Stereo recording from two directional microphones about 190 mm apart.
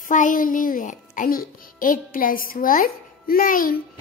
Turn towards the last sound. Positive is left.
turn(degrees=45)  # may be behind; listen again after turning